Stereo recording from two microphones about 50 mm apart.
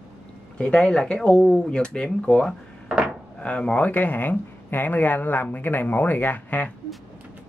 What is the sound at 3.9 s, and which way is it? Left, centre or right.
Speech, left.